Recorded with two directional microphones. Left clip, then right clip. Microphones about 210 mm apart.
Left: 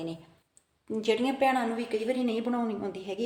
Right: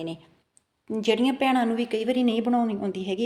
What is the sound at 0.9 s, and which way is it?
A woman's voice, 35° right (ahead or behind).